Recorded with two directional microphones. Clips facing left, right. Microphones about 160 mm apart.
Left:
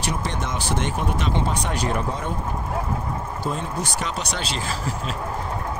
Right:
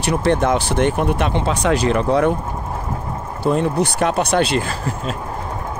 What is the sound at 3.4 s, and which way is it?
Speech, 65° right (ahead or behind).